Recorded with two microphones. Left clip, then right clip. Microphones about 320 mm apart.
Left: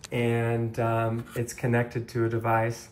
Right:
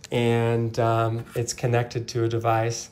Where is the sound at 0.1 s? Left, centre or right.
Centre.